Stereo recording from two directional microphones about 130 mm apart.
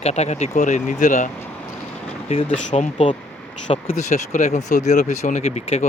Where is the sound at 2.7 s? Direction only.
60° left (ahead or behind).